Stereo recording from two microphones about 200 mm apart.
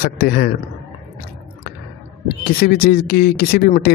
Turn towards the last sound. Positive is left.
turn(degrees=50)  # may be behind; listen again after turning